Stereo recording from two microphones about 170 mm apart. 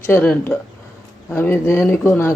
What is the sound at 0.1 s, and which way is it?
Speech, 10° left (ahead or behind).